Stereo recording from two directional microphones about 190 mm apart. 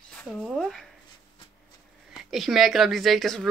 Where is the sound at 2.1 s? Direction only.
Centre (ahead or behind).